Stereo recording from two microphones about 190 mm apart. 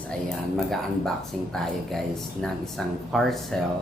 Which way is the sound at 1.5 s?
Centre (ahead or behind).